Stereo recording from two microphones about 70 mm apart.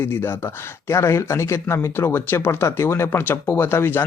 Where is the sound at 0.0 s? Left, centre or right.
Left.